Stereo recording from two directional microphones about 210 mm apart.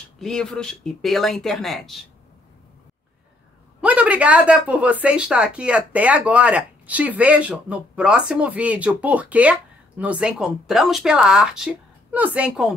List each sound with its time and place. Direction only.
0.2 s speech: centre (ahead or behind)
3.8 s speech: 5° right (ahead or behind)